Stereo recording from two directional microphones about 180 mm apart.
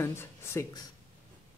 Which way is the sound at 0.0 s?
15° left (ahead or behind).